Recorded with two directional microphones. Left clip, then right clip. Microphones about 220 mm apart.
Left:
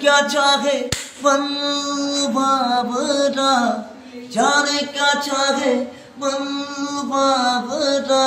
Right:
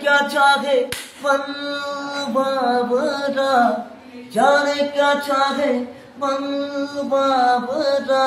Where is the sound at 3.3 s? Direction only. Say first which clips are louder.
Left 1 dB; 10° right (ahead or behind).